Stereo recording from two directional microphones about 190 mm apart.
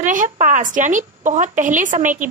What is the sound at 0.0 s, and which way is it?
A woman's voice, 45° right (ahead or behind).